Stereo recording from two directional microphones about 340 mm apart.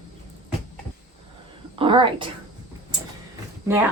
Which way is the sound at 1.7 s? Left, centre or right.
Centre.